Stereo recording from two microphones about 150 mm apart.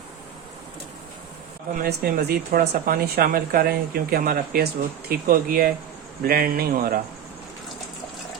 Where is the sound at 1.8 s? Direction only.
85° right.